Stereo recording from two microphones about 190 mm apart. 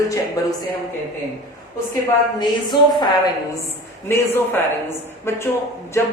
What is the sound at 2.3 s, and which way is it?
Speech, 25° left (ahead or behind).